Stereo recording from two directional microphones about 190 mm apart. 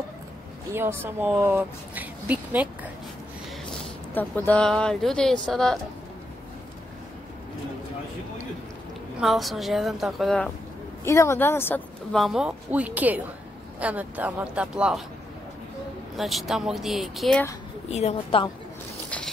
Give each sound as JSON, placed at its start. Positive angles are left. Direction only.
{"t": 0.7, "sound": "speech", "side_deg": -10}
{"t": 4.1, "sound": "speech", "side_deg": 10}
{"t": 9.2, "sound": "speech", "side_deg": 0}
{"t": 11.1, "sound": "speech", "side_deg": 15}
{"t": 16.2, "sound": "speech", "side_deg": 0}
{"t": 17.8, "sound": "a woman's voice", "side_deg": 35}
{"t": 19.0, "sound": "a sound", "side_deg": 5}